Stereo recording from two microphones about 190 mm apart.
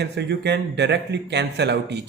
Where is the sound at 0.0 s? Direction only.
60° right (ahead or behind).